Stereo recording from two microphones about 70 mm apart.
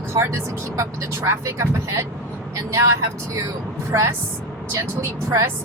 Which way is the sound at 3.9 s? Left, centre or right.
Right.